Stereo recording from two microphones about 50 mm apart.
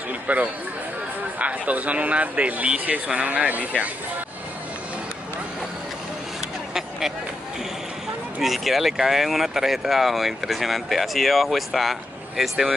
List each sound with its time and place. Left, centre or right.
0.3 s speech: right
8.4 s speech: centre